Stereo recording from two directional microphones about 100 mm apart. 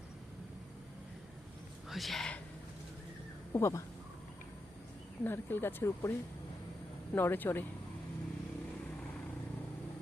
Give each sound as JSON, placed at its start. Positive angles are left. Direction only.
{"t": 1.9, "sound": "speech", "side_deg": 0}
{"t": 3.5, "sound": "speech", "side_deg": 30}
{"t": 5.2, "sound": "speech", "side_deg": 20}
{"t": 7.2, "sound": "speech", "side_deg": 20}